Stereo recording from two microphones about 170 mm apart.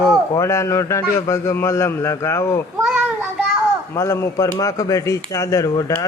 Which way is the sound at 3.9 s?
15° left (ahead or behind).